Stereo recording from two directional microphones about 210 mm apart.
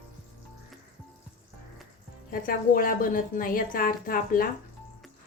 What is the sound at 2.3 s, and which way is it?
A woman's voice, 45° left (ahead or behind).